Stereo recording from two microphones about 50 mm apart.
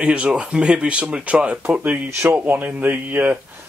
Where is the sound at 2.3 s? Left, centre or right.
Right.